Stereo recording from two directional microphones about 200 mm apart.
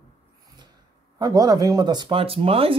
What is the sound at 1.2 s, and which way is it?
Speech, 20° right (ahead or behind).